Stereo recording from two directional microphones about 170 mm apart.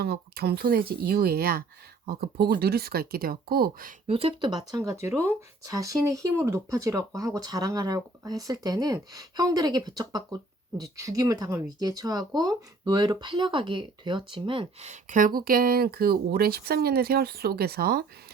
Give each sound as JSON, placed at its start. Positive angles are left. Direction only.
{"t": 0.0, "sound": "speech", "side_deg": -65}
{"t": 4.0, "sound": "speech", "side_deg": -35}